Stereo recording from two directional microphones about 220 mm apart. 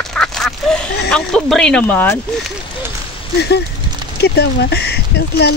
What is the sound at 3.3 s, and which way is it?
Speech, 50° left (ahead or behind).